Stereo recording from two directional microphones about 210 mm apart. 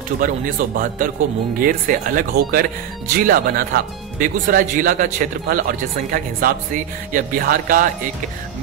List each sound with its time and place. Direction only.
0.2 s speech: 40° right (ahead or behind)